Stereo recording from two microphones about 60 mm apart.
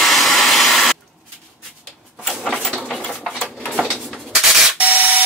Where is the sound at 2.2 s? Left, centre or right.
Centre.